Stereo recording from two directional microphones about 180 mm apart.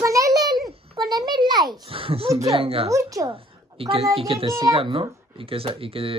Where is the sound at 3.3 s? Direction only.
30° right (ahead or behind).